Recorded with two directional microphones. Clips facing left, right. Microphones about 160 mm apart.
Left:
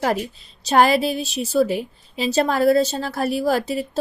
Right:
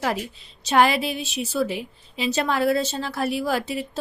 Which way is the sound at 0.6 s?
40° left (ahead or behind).